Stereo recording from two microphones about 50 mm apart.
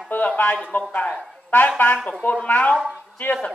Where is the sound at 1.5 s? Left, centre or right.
Left.